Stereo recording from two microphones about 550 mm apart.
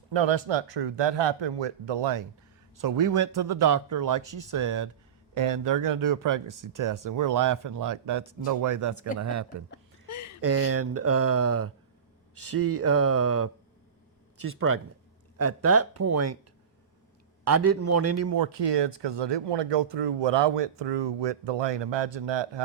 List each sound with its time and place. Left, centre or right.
0.1 s speech: right
10.1 s a sound: left
10.4 s speech: right
17.4 s speech: right
18.5 s speech: right